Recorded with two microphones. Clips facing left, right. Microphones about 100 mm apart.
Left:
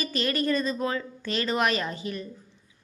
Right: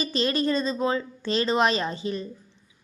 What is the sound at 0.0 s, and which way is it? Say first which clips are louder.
A woman's voice: right 3 dB; 25° right (ahead or behind).